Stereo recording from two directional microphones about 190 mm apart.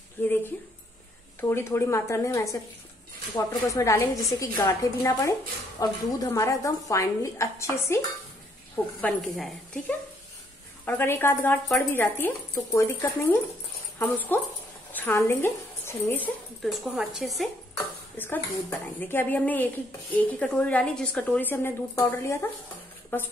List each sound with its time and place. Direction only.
0.2 s a sound: 10° left (ahead or behind)
1.4 s speech: 15° left (ahead or behind)
9.0 s a woman's voice: 5° left (ahead or behind)
16.6 s a woman's voice: centre (ahead or behind)
17.7 s speech: 10° left (ahead or behind)